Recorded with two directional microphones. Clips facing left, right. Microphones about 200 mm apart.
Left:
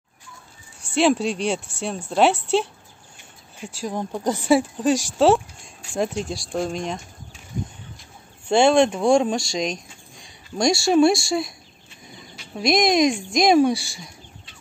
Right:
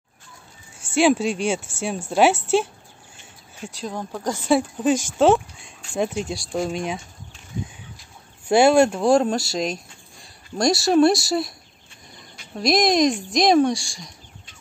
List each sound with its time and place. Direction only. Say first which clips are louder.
0.9 s speech: right 1 dB; centre (ahead or behind)
3.9 s a woman's voice: left 4 dB; 15° left (ahead or behind)
4.5 s speech: even; centre (ahead or behind)
8.5 s speech: right 1 dB; 5° right (ahead or behind)
12.5 s speech: even; centre (ahead or behind)